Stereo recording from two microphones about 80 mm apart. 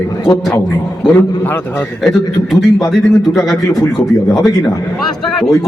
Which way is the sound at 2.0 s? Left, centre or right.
Centre.